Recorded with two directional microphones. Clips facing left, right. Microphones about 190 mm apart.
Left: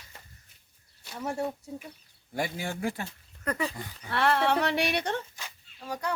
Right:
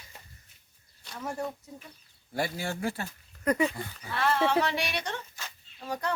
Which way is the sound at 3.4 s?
10° right (ahead or behind).